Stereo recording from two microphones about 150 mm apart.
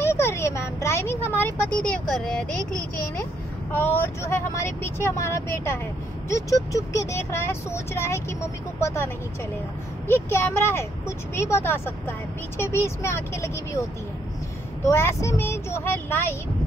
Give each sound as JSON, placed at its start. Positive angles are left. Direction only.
{"t": 0.0, "sound": "vehicle", "side_deg": 15}
{"t": 1.4, "sound": "speech", "side_deg": 5}
{"t": 3.7, "sound": "speech", "side_deg": 10}
{"t": 14.9, "sound": "speech", "side_deg": 15}